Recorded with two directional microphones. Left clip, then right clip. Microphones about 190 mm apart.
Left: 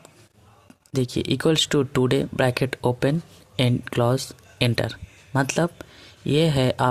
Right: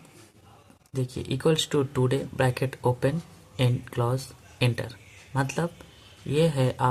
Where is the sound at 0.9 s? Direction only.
40° left (ahead or behind).